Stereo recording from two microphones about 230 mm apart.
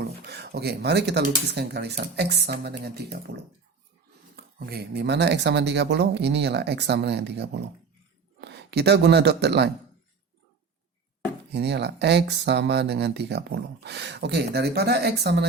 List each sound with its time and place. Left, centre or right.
0.0 s speech: right
11.5 s speech: right